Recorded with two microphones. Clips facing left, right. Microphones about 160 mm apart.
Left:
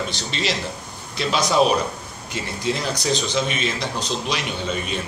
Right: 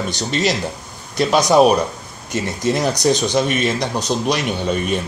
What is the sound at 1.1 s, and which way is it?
Speech, 40° right (ahead or behind).